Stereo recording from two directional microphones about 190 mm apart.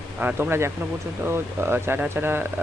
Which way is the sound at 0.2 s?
10° right (ahead or behind).